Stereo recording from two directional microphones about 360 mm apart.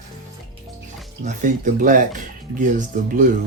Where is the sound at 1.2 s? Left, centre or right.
Right.